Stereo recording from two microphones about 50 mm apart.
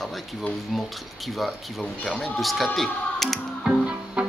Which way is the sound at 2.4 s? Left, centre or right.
Centre.